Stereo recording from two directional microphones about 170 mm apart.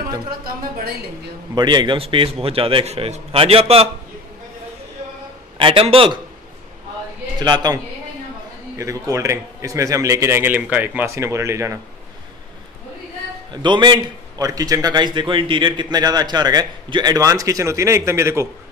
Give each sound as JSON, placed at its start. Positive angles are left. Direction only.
{"t": 0.4, "sound": "speech", "side_deg": -60}
{"t": 1.5, "sound": "a man's voice", "side_deg": -25}
{"t": 5.6, "sound": "a man's voice", "side_deg": -30}
{"t": 7.3, "sound": "a man's voice", "side_deg": -25}
{"t": 13.5, "sound": "a man's voice", "side_deg": -25}